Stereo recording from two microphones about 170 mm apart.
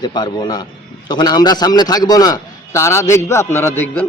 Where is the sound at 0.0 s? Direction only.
25° left (ahead or behind).